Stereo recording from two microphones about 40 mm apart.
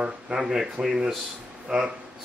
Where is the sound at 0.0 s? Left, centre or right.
Right.